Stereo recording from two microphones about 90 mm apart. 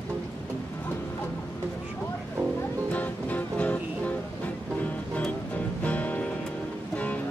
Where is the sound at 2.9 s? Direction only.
15° left (ahead or behind).